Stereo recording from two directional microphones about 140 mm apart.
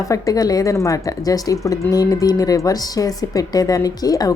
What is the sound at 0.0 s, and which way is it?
Speech, 25° left (ahead or behind).